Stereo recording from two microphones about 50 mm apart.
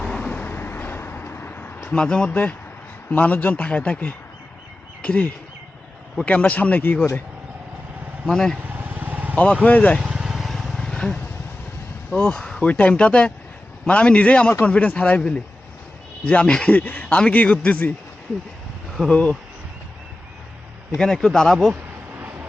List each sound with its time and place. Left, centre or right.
0.0 s vehicle: centre
0.3 s vehicle: left
1.9 s speech: centre
2.3 s speech: left
8.3 s speech: centre
8.6 s vehicle: right
9.3 s speech: left
10.0 s vehicle: centre
10.8 s vehicle: centre
12.1 s speech: centre
16.7 s speech: left
19.0 s speech: left
21.0 s speech: centre